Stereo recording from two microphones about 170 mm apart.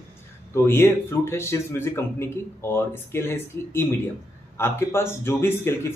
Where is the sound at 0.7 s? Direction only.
15° left (ahead or behind).